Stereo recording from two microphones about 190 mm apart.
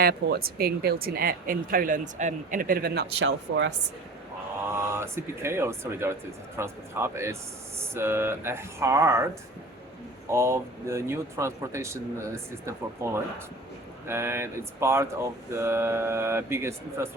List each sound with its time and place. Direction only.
0.0 s a woman's voice: 55° right (ahead or behind); by 3.7 s 75° right (ahead or behind)
4.7 s speech: 15° right (ahead or behind)
14.1 s speech: 15° right (ahead or behind)